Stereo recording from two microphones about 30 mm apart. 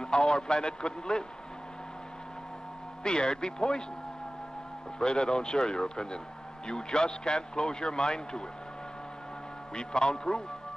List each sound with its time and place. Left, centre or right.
0.0 s a man's voice: left
3.0 s a man's voice: left
4.9 s a man's voice: left
9.8 s a man's voice: left